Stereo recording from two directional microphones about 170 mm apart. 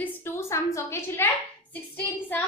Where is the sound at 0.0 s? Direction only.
15° left (ahead or behind).